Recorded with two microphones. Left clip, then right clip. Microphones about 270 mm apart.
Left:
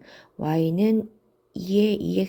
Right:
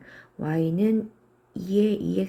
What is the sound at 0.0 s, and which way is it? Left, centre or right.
Speech, centre.